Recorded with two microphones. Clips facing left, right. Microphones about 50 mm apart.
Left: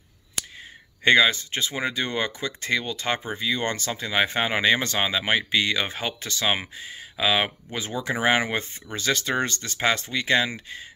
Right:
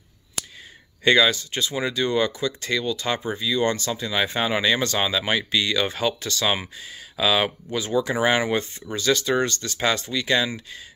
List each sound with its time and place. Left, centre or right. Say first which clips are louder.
1.0 s speech: even; left